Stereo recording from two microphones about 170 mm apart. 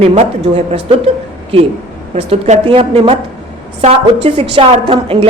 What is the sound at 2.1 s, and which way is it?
A woman's voice, 35° right (ahead or behind).